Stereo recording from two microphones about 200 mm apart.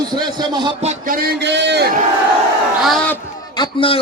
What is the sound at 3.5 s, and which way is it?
Speech, 25° left (ahead or behind).